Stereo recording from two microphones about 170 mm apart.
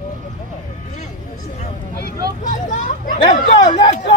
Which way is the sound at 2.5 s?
45° left (ahead or behind).